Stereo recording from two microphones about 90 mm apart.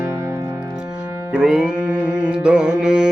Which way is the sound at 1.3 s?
10° right (ahead or behind).